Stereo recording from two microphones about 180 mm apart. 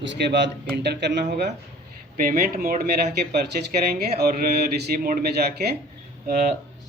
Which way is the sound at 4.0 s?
60° right (ahead or behind).